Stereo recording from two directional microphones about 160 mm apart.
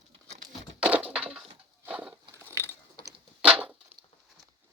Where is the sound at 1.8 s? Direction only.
10° right (ahead or behind).